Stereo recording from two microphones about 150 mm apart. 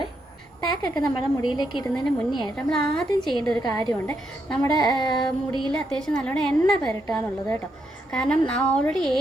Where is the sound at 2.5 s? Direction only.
5° left (ahead or behind).